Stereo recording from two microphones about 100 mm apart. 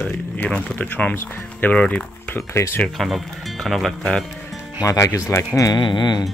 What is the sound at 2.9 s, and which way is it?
Speech, centre (ahead or behind).